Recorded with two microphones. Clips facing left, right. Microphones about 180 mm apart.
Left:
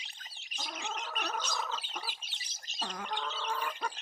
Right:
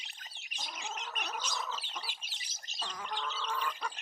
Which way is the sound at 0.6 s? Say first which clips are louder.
Left 3 dB; 60° left (ahead or behind).